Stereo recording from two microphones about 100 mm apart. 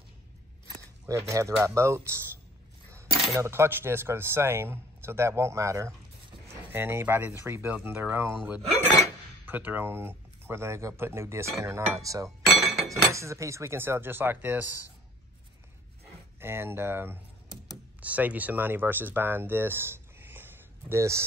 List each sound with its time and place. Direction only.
1.0 s speech: 30° right (ahead or behind)
9.5 s speech: 20° right (ahead or behind)
16.3 s speech: 25° right (ahead or behind)